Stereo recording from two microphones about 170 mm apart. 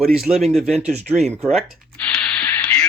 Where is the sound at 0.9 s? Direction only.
40° right (ahead or behind).